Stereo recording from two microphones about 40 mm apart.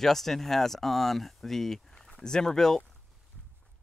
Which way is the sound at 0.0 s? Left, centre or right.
Centre.